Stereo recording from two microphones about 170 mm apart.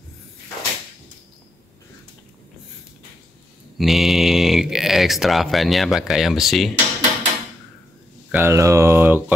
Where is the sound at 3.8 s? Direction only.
Centre (ahead or behind).